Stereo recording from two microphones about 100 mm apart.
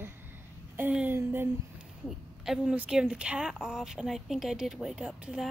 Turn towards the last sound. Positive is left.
turn(degrees=-10)  # may be behind; listen again after turning